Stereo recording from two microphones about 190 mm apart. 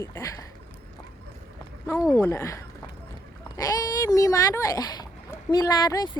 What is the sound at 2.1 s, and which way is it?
Speech, 15° left (ahead or behind).